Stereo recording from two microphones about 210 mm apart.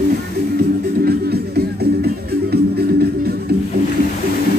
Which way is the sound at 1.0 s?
50° right (ahead or behind).